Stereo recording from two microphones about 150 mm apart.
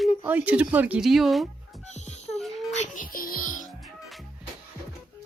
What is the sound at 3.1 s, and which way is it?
Music, 70° left (ahead or behind).